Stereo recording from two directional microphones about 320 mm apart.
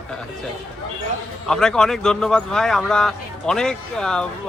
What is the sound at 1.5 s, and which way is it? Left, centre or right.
A man's voice, centre.